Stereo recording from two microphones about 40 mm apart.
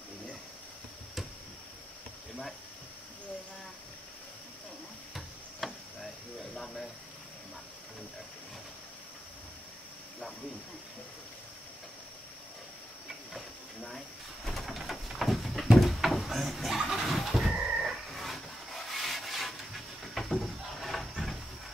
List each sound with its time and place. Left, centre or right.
5.6 s chop: centre
13.8 s a sound: centre
15.8 s cupboard open or close: centre
16.9 s bird: centre